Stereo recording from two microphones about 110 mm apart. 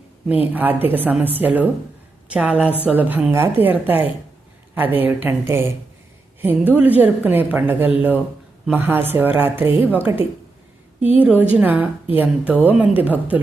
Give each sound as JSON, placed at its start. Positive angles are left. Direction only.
{"t": 0.5, "sound": "a woman's voice", "side_deg": -15}